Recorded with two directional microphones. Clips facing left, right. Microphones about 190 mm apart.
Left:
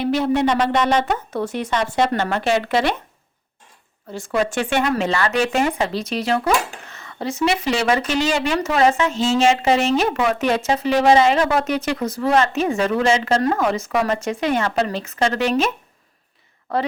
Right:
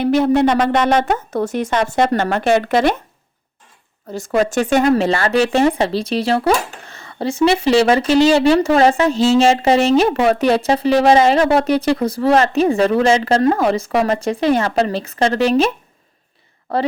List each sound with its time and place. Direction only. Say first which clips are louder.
0.0 s speech: right 5 dB; 50° right (ahead or behind)
4.1 s speech: right 4 dB; 40° right (ahead or behind)